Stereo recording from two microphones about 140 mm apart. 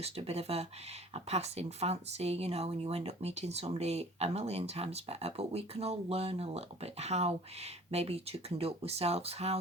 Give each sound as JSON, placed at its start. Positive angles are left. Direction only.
{"t": 0.0, "sound": "speech", "side_deg": -45}